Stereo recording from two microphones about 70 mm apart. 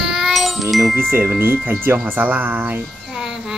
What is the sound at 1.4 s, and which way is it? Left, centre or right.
Speech, right.